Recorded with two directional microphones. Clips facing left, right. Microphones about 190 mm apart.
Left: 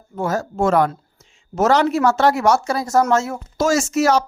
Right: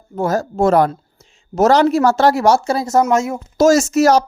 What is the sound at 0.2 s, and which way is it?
Speech, 35° right (ahead or behind).